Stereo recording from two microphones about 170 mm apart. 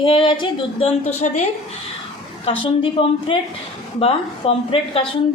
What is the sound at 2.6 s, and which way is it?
A woman's voice, 30° left (ahead or behind).